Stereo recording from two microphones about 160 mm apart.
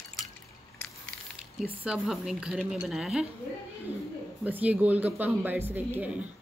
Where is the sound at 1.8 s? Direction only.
5° right (ahead or behind).